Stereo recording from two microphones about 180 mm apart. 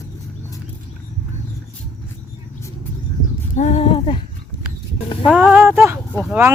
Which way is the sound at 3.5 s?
40° left (ahead or behind).